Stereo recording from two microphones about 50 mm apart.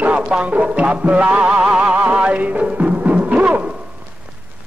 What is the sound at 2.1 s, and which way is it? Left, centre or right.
Timpani, right.